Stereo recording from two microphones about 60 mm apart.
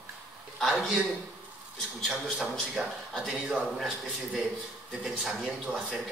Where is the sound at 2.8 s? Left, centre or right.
Centre.